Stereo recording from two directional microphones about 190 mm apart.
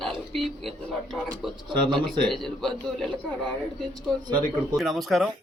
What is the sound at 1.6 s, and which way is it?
Speech, 25° right (ahead or behind).